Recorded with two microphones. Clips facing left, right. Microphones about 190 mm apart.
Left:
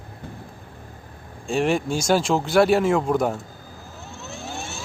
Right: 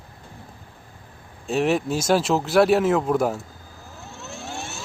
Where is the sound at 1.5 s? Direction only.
5° right (ahead or behind).